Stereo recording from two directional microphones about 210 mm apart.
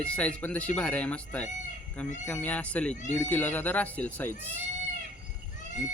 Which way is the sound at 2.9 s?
35° left (ahead or behind).